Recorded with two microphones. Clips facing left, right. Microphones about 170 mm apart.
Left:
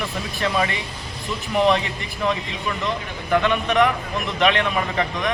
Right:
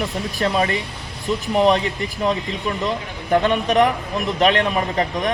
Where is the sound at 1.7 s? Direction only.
40° right (ahead or behind).